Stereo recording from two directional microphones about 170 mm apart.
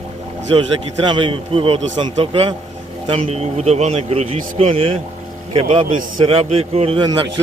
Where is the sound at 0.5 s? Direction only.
30° right (ahead or behind).